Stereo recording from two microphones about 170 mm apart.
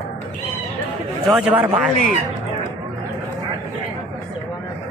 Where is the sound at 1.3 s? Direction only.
5° right (ahead or behind).